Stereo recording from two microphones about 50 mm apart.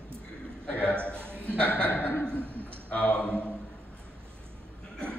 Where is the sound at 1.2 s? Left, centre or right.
Right.